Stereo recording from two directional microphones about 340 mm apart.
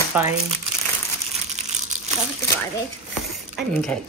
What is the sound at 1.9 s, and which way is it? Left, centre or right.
Crumpling, right.